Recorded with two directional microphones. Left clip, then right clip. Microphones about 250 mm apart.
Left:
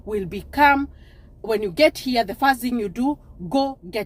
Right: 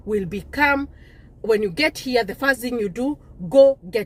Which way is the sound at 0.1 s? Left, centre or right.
Centre.